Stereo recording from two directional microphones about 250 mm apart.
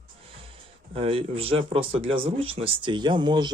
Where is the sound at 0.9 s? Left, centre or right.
Right.